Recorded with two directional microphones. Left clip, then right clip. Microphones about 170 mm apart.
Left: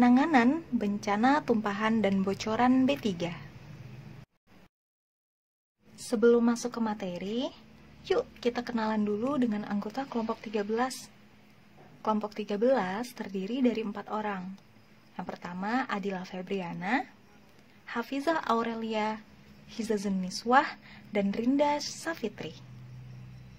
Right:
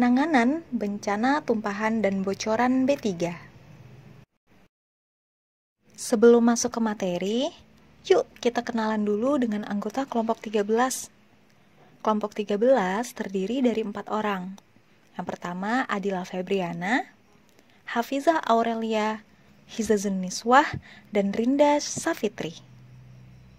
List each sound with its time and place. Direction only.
0.0 s a woman's voice: 30° right (ahead or behind)
6.0 s speech: 40° right (ahead or behind)
12.0 s speech: 40° right (ahead or behind)